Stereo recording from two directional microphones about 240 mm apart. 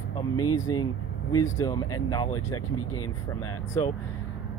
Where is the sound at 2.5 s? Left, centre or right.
Left.